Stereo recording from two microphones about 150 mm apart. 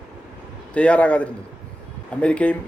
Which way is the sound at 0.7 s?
10° left (ahead or behind).